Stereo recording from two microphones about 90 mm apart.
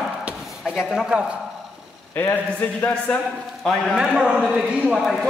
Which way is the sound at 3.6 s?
5° left (ahead or behind).